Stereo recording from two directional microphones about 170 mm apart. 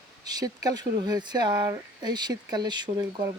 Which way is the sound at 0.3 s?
20° right (ahead or behind).